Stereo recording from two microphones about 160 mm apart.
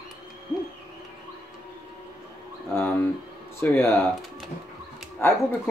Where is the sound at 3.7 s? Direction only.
15° left (ahead or behind).